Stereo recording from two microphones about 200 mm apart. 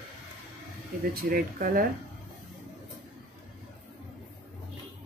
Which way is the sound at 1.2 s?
45° right (ahead or behind).